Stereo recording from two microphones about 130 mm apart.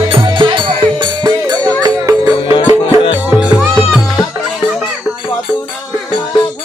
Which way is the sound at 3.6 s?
Centre (ahead or behind).